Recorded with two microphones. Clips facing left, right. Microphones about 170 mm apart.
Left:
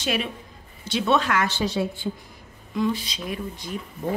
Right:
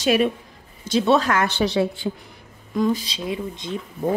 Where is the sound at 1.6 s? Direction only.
75° right (ahead or behind).